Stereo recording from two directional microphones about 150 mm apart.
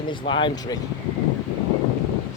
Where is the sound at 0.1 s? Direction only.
35° left (ahead or behind).